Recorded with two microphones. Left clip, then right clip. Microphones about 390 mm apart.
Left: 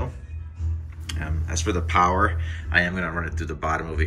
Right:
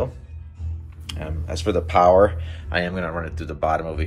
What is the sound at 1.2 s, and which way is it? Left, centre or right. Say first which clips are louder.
Speech: right 3 dB; centre.